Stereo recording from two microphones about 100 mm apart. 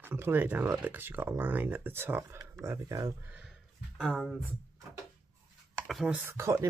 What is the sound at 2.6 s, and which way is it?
Speech, 35° right (ahead or behind).